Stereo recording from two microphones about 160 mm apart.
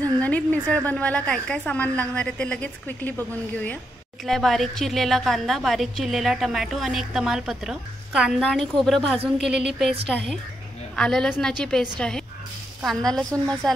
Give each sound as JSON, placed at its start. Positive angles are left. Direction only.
{"t": 0.0, "sound": "a woman's voice", "side_deg": 10}